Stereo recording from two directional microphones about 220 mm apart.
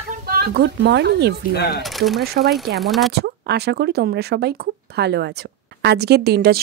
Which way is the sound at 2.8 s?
Centre (ahead or behind).